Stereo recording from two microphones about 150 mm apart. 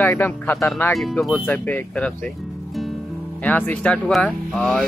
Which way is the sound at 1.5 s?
10° left (ahead or behind).